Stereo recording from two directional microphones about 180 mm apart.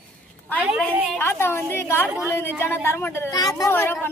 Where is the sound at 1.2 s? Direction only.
15° left (ahead or behind).